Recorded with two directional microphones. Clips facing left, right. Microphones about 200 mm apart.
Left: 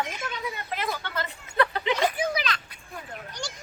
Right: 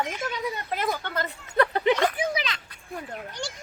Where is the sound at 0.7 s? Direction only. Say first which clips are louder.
Right 2 dB; 45° right (ahead or behind).